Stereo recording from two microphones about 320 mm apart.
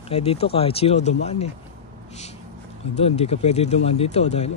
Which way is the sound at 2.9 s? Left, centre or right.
Centre.